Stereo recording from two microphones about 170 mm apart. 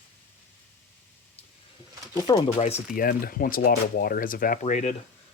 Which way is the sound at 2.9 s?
55° left (ahead or behind).